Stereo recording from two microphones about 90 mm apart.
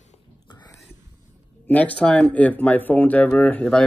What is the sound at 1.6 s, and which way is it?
Speech, 15° left (ahead or behind).